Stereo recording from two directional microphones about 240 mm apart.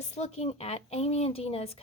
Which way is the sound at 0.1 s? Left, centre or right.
Left.